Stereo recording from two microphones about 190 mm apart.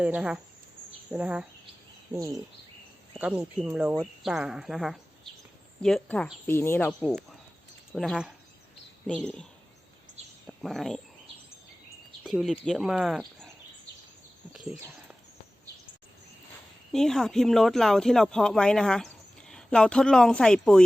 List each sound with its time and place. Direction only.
0.0 s speech: 5° right (ahead or behind)
2.1 s speech: 15° right (ahead or behind)
3.2 s speech: 5° right (ahead or behind)
12.2 s speech: centre (ahead or behind)
14.5 s a sound: 5° right (ahead or behind)
16.9 s speech: centre (ahead or behind)